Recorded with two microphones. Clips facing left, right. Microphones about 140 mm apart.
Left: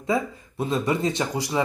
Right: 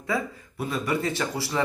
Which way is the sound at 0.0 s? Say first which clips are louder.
Left 4 dB; 25° left (ahead or behind).